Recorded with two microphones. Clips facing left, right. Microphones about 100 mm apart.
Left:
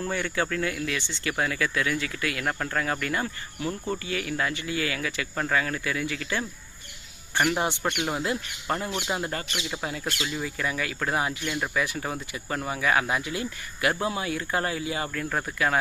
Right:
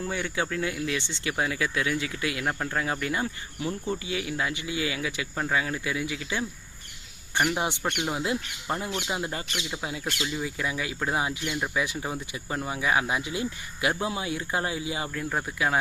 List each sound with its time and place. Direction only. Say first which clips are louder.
0.0 s speech: left 2 dB; 10° right (ahead or behind)
8.1 s speech: even; 10° right (ahead or behind)